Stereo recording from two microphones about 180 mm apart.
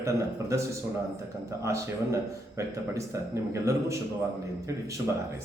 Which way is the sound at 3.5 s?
15° right (ahead or behind).